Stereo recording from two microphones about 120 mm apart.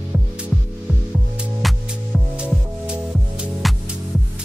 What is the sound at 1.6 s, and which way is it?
Music, centre (ahead or behind).